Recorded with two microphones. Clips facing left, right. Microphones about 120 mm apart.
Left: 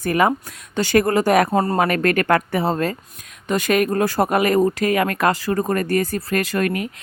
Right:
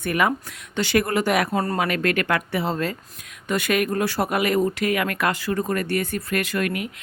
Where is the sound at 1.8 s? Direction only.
45° left (ahead or behind).